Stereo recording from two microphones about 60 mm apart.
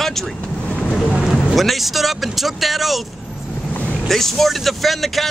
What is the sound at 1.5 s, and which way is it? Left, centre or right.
Speech, centre.